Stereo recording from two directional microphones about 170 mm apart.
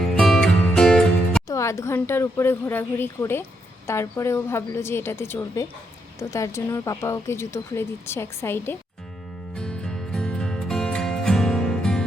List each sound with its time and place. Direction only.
0.1 s music: 5° left (ahead or behind)
1.5 s speech: 15° left (ahead or behind)
9.6 s music: 5° left (ahead or behind)